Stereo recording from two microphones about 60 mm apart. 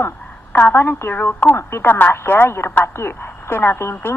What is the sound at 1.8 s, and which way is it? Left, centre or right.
A woman's voice, left.